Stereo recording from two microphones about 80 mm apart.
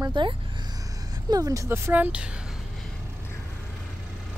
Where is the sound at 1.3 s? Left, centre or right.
Right.